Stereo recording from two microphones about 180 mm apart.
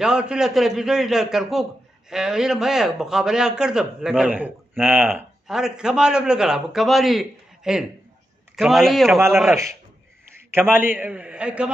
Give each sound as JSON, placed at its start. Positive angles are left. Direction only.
{"t": 0.0, "sound": "a man's voice", "side_deg": -5}